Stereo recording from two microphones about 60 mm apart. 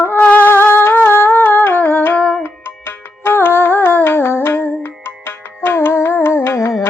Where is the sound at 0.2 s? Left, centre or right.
Left.